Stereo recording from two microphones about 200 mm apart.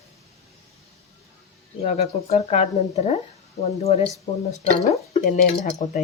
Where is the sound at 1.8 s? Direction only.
30° left (ahead or behind).